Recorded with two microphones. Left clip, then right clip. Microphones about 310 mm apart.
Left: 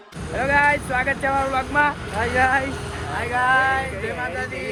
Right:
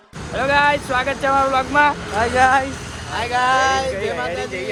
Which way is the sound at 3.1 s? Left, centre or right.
Right.